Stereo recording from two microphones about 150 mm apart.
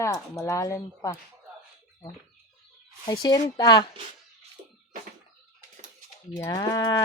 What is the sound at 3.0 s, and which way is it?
Speech, 25° left (ahead or behind).